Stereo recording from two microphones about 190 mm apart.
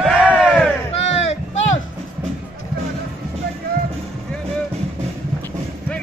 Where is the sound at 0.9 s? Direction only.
35° left (ahead or behind).